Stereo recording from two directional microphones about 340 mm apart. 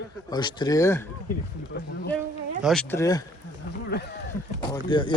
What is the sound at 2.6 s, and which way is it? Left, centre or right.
Speech, centre.